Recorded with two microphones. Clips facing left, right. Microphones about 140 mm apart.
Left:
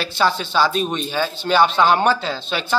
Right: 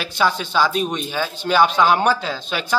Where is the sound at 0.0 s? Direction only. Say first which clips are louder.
Left 1 dB; 10° right (ahead or behind).